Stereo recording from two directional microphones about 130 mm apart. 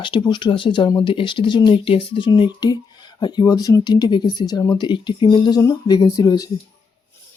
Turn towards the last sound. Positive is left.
turn(degrees=25)  # may be behind; listen again after turning